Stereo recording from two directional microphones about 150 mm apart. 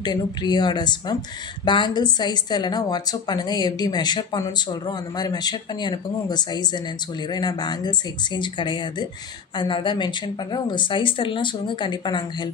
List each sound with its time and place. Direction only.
0.0 s a woman's voice: 30° left (ahead or behind)